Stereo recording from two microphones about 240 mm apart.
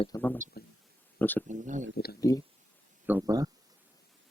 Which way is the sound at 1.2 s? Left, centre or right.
Centre.